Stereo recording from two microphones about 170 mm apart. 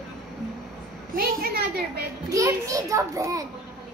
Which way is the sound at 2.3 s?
20° right (ahead or behind).